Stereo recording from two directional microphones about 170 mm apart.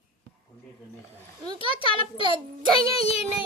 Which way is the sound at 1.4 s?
30° right (ahead or behind).